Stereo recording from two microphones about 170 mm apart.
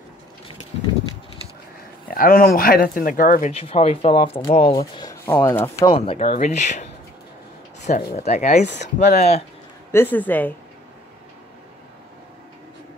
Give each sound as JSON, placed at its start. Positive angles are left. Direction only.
{"t": 2.1, "sound": "speech", "side_deg": 60}
{"t": 3.6, "sound": "speech", "side_deg": 35}
{"t": 5.2, "sound": "speech", "side_deg": 15}
{"t": 5.9, "sound": "speech", "side_deg": 35}
{"t": 8.2, "sound": "speech", "side_deg": 40}
{"t": 8.6, "sound": "speech", "side_deg": 90}
{"t": 9.8, "sound": "speech", "side_deg": 15}